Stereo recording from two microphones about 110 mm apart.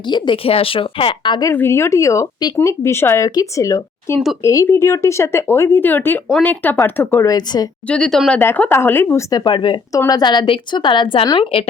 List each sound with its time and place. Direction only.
0.1 s a woman's voice: 55° left (ahead or behind)
1.5 s speech: 25° left (ahead or behind)
3.2 s speech: 30° left (ahead or behind)
7.3 s speech: 35° left (ahead or behind)
7.9 s speech: 5° left (ahead or behind)
8.4 s speech: 15° left (ahead or behind)
9.3 s speech: 40° left (ahead or behind)
9.9 s a woman's voice: 30° left (ahead or behind); by 11.7 s 55° left (ahead or behind)